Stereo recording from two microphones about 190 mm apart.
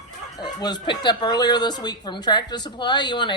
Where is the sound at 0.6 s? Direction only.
20° left (ahead or behind).